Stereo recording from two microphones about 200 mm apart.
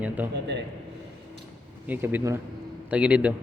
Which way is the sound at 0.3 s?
60° right (ahead or behind).